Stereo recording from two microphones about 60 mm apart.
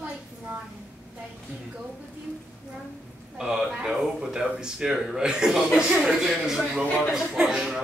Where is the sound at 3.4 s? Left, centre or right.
Centre.